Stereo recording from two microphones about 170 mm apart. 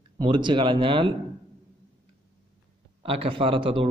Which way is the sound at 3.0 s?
35° right (ahead or behind).